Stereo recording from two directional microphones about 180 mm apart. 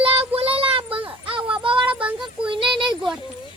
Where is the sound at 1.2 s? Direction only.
30° right (ahead or behind).